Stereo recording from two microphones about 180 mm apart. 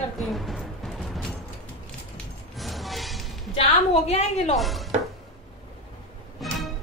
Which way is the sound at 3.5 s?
35° left (ahead or behind).